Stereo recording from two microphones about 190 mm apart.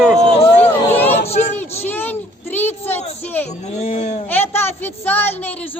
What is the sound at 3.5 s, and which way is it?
Speech, 35° left (ahead or behind).